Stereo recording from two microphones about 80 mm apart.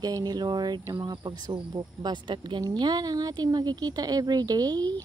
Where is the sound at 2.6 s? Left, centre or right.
Right.